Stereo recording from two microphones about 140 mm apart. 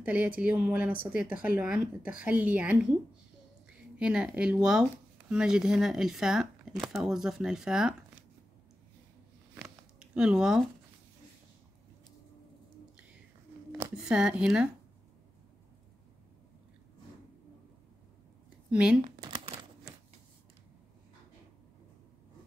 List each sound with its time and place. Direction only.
0.0 s speech: 10° right (ahead or behind)
4.0 s speech: 5° right (ahead or behind)
9.6 s a sound: 5° right (ahead or behind)
13.9 s speech: 5° right (ahead or behind)
18.7 s speech: 5° right (ahead or behind)
19.2 s crumpling: 45° right (ahead or behind)